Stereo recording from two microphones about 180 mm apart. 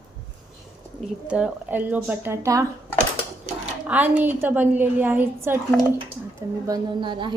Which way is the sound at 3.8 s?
10° right (ahead or behind).